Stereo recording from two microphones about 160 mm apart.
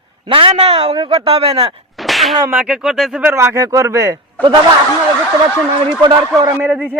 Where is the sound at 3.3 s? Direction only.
15° right (ahead or behind).